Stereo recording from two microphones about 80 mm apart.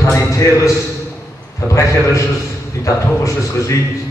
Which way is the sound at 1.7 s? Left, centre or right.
Left.